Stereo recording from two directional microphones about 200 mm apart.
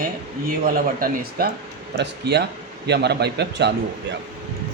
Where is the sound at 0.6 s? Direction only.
45° right (ahead or behind).